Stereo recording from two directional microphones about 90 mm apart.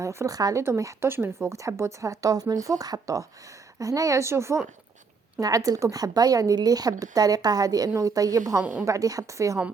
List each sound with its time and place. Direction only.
0.0 s speech: 35° right (ahead or behind)
0.3 s a woman's voice: 45° right (ahead or behind)
5.4 s a woman's voice: 40° right (ahead or behind)